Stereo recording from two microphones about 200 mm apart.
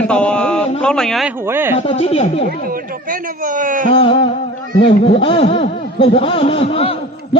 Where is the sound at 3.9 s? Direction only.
25° left (ahead or behind).